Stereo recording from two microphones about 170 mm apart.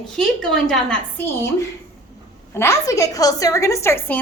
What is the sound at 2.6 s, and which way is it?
A woman's voice, 15° left (ahead or behind).